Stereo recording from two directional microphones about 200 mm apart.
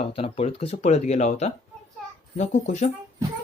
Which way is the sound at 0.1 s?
30° left (ahead or behind).